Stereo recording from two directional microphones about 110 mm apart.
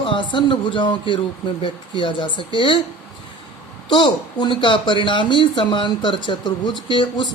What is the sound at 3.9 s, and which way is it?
Speech, 45° left (ahead or behind).